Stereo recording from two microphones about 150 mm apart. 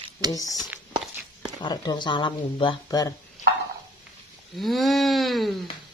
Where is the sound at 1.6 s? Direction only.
30° left (ahead or behind).